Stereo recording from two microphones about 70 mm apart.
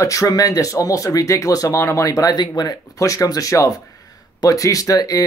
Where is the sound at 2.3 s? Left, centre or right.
Left.